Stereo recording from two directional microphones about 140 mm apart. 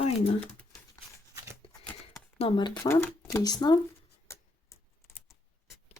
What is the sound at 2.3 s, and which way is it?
Speech, 40° left (ahead or behind).